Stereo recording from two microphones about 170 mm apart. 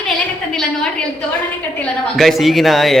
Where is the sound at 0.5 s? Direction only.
5° left (ahead or behind).